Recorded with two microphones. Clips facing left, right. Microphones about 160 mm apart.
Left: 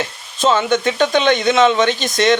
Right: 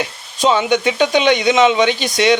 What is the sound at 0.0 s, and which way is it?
Speech, 15° right (ahead or behind).